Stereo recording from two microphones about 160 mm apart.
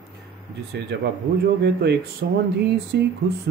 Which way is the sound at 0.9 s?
90° right.